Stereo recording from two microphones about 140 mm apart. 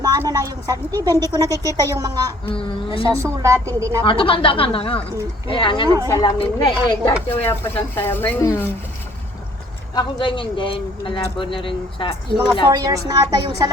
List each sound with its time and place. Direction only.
0.3 s speech: 25° right (ahead or behind)
2.5 s speech: 40° left (ahead or behind)
3.2 s speech: 20° right (ahead or behind)
4.0 s speech: 40° left (ahead or behind)
7.3 s speech: 15° left (ahead or behind)
9.9 s speech: 35° left (ahead or behind)
12.7 s speech: 25° right (ahead or behind)